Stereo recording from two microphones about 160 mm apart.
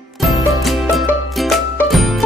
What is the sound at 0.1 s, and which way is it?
Music, centre (ahead or behind).